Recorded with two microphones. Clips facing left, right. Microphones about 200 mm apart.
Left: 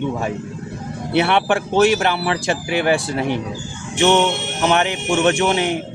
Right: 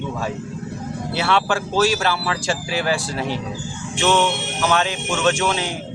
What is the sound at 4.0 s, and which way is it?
Speech, 20° left (ahead or behind).